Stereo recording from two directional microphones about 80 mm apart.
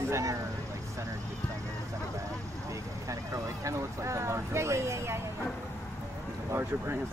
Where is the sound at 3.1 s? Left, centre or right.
Right.